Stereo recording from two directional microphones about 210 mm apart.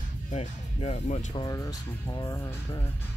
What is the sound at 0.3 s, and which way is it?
Speech, 30° left (ahead or behind).